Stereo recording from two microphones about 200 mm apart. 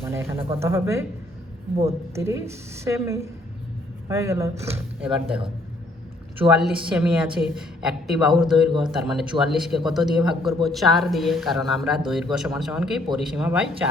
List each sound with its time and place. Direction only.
0.0 s a woman's voice: 10° right (ahead or behind)
2.1 s a woman's voice: 15° right (ahead or behind)
4.9 s speech: 30° right (ahead or behind)
6.4 s speech: 5° right (ahead or behind)